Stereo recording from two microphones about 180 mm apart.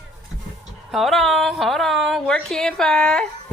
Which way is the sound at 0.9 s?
Centre (ahead or behind).